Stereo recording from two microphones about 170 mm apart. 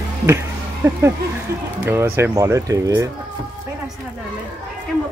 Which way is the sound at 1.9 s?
15° right (ahead or behind).